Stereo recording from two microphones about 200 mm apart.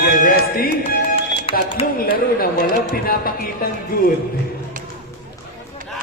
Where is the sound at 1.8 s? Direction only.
45° left (ahead or behind).